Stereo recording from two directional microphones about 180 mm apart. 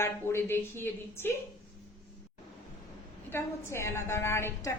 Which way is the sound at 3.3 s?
15° left (ahead or behind).